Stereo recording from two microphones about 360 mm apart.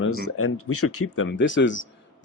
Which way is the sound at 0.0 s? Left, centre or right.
Left.